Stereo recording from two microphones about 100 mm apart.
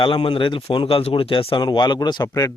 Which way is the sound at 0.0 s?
55° left (ahead or behind).